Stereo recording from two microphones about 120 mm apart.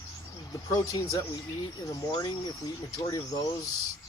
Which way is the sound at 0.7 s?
25° left (ahead or behind).